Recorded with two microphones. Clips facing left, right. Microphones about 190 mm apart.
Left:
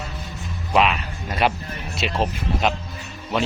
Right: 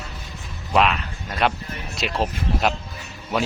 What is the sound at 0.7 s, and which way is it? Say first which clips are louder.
Speech: even; centre (ahead or behind).